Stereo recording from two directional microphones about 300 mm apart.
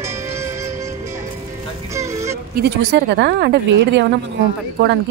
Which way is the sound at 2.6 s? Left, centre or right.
Right.